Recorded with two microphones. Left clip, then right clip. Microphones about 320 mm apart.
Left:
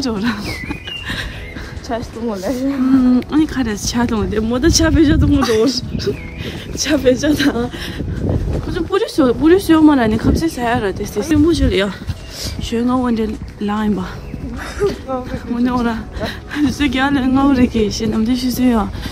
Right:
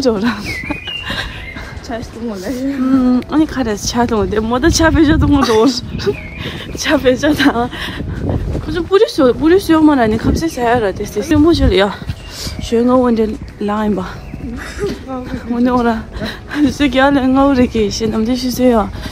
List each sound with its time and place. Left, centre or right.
0.0 s speech: centre
0.7 s a sound: centre
2.3 s speech: centre
8.6 s speech: centre
11.3 s speech: centre
12.6 s speech: centre
15.6 s speech: centre